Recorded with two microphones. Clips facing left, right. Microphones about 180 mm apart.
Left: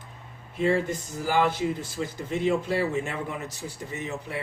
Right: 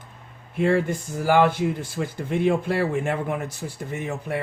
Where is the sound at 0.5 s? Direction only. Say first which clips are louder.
Right 3 dB; 55° right (ahead or behind).